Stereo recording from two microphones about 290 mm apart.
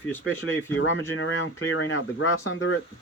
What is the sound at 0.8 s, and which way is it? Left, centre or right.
Speech, left.